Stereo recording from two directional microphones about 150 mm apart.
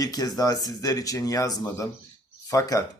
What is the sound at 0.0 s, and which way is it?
Speech, 25° left (ahead or behind).